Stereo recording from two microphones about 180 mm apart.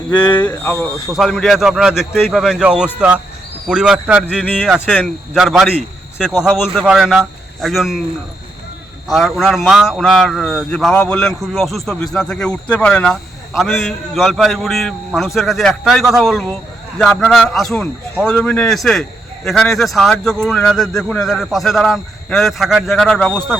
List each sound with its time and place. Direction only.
0.2 s speech: 25° left (ahead or behind)
0.4 s a man's voice: 10° left (ahead or behind)
4.4 s a man's voice: 10° left (ahead or behind)
9.0 s a man's voice: centre (ahead or behind)